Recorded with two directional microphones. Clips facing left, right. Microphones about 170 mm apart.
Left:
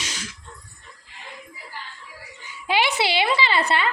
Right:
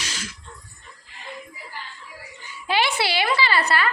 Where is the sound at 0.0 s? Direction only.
20° left (ahead or behind).